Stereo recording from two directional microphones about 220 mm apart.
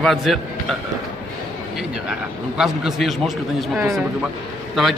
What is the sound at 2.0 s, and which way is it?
A man's voice, 5° right (ahead or behind).